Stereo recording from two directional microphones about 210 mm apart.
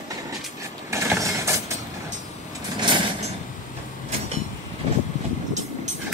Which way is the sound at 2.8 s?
20° right (ahead or behind).